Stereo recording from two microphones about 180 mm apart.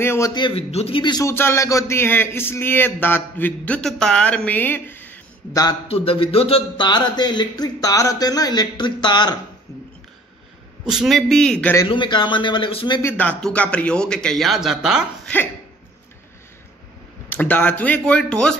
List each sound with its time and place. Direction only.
0.0 s a man's voice: 15° left (ahead or behind)
0.3 s a man's voice: 25° left (ahead or behind)
5.9 s speech: 30° left (ahead or behind)
10.8 s a man's voice: 5° right (ahead or behind)
11.7 s speech: 25° left (ahead or behind)
13.0 s a man's voice: 10° left (ahead or behind)
17.3 s a man's voice: 10° left (ahead or behind)